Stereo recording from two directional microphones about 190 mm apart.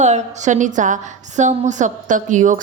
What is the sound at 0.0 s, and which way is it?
A woman's voice, 35° right (ahead or behind).